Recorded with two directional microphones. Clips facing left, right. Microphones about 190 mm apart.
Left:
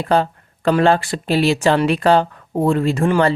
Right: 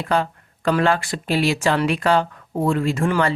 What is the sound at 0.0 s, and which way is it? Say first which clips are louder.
Speech: left 4 dB; 30° left (ahead or behind).